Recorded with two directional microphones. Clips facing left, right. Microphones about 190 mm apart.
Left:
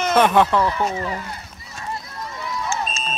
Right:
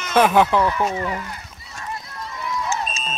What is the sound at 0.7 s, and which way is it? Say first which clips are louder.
Speech: right 1 dB; 25° left (ahead or behind).